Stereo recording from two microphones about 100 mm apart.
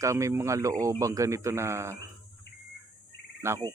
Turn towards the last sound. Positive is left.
turn(degrees=-30)  # may be behind; listen again after turning